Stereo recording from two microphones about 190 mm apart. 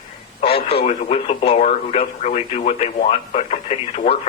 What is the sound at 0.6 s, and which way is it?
Speech, 35° left (ahead or behind).